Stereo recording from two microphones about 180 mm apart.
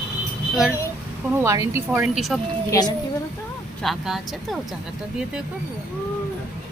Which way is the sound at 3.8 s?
Centre (ahead or behind).